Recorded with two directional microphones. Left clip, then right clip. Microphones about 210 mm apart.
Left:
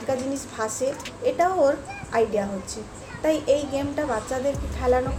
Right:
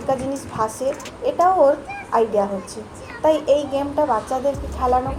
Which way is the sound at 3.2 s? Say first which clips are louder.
Right 5 dB; centre (ahead or behind).